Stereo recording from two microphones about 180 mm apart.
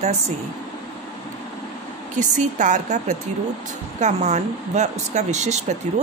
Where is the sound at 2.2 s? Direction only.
45° right (ahead or behind).